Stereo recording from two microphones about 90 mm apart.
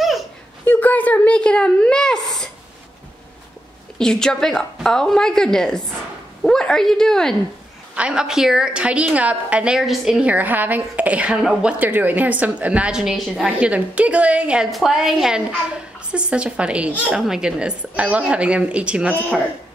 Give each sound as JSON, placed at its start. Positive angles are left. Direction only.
{"t": 0.7, "sound": "a sound", "side_deg": 20}
{"t": 4.0, "sound": "a woman's voice", "side_deg": 5}
{"t": 7.9, "sound": "a woman's voice", "side_deg": -10}
{"t": 14.7, "sound": "a woman's voice", "side_deg": 0}